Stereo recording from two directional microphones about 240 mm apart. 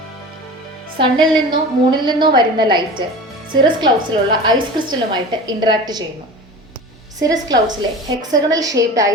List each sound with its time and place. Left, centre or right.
0.9 s a woman's voice: centre
7.2 s a woman's voice: centre